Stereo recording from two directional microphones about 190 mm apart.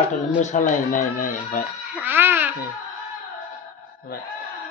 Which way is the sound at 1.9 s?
10° right (ahead or behind).